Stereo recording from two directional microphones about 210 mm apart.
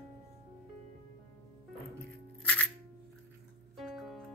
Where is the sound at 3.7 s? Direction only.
Centre (ahead or behind).